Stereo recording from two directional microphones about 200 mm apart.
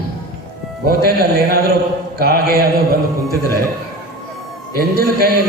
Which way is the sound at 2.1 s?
50° right (ahead or behind).